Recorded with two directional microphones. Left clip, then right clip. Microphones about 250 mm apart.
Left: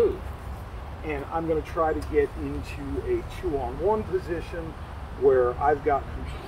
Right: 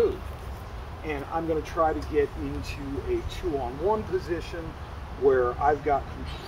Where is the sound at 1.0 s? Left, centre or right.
Centre.